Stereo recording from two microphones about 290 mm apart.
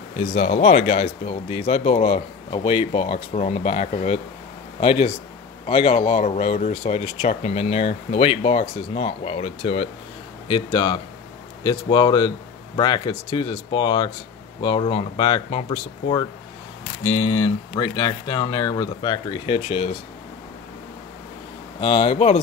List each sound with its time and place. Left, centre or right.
0.3 s speech: left
21.7 s speech: centre